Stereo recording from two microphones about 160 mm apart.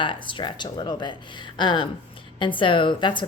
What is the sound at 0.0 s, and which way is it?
A woman's voice, 30° left (ahead or behind).